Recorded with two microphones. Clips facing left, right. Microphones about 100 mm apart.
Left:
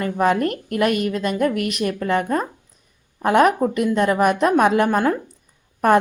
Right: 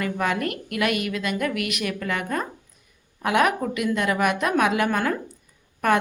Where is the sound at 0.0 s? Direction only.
35° left (ahead or behind).